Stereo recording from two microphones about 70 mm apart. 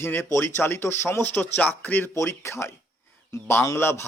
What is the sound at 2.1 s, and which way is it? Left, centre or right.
A man's voice, left.